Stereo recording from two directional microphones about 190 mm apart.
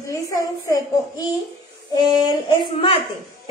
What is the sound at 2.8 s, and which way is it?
Speech, 30° left (ahead or behind).